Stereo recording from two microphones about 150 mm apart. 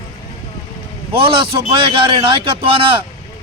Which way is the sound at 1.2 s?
35° right (ahead or behind).